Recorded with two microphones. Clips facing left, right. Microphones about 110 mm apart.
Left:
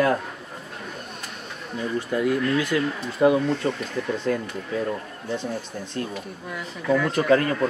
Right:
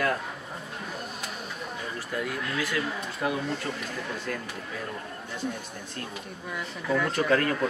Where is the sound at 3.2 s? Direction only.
25° left (ahead or behind).